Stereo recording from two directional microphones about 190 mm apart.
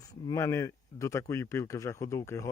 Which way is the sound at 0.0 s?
20° left (ahead or behind).